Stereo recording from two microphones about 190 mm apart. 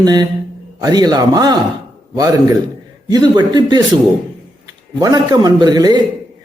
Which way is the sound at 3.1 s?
20° right (ahead or behind).